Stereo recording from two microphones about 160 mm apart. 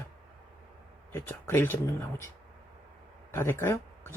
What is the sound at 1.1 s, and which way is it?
Speech, 15° left (ahead or behind).